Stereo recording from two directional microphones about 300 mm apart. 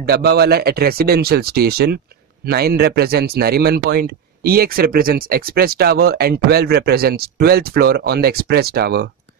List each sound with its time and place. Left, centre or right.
0.0 s speech: right